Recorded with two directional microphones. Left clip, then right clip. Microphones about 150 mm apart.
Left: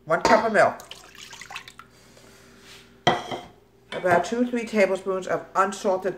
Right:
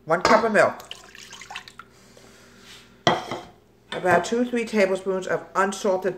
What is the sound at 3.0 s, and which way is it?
Dishes, 25° right (ahead or behind).